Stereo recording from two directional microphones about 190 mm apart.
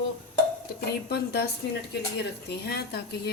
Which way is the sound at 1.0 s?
55° left (ahead or behind).